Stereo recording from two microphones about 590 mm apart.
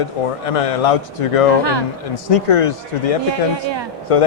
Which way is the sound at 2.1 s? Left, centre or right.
Left.